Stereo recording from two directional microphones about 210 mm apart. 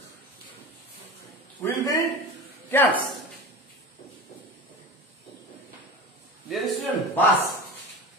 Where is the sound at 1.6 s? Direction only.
20° left (ahead or behind).